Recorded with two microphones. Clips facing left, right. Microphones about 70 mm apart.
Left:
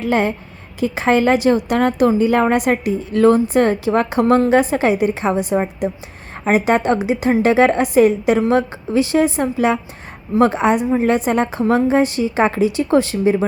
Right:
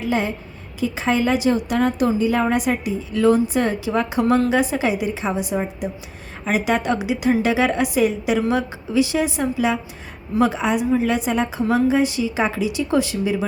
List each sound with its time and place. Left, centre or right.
0.0 s a woman's voice: left